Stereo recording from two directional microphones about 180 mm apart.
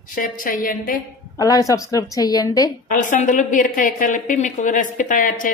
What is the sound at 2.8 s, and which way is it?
A man's voice, 45° left (ahead or behind).